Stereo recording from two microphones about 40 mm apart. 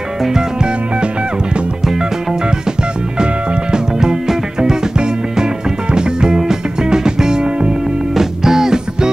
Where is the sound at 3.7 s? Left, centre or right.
Centre.